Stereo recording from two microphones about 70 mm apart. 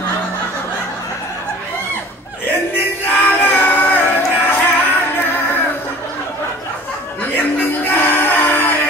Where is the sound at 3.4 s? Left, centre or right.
Left.